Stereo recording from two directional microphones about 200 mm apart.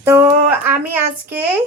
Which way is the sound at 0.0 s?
10° right (ahead or behind).